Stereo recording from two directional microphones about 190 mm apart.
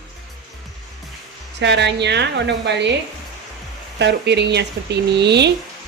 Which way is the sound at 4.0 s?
65° right (ahead or behind).